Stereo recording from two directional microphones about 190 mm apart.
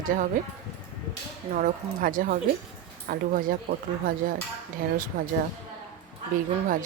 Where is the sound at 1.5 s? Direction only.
45° right (ahead or behind).